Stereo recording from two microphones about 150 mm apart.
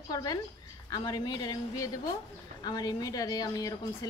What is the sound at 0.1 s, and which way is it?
A woman's voice, 25° left (ahead or behind).